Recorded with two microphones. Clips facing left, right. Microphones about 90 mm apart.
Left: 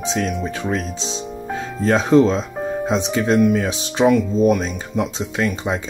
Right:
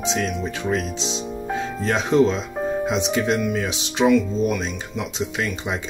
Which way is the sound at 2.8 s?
35° left (ahead or behind).